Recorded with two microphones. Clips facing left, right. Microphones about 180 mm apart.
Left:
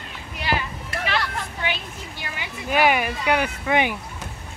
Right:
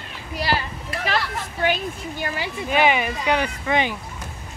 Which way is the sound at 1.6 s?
45° right (ahead or behind).